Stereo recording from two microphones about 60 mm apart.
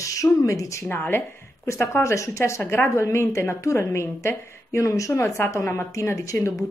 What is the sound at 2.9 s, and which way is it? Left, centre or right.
A woman's voice, left.